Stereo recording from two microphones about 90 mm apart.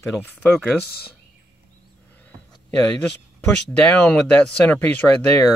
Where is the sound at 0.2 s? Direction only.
15° left (ahead or behind).